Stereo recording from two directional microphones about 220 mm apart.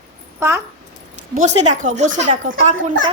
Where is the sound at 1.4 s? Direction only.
30° right (ahead or behind).